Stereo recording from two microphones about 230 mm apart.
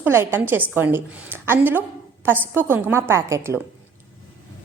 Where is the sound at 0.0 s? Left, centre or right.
Centre.